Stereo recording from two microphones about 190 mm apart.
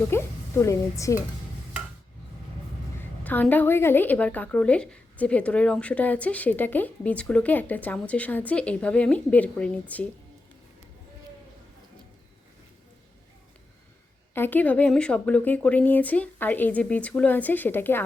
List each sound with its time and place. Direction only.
0.1 s a woman's voice: 15° left (ahead or behind)
3.0 s a woman's voice: 10° left (ahead or behind)
14.3 s a woman's voice: 10° left (ahead or behind)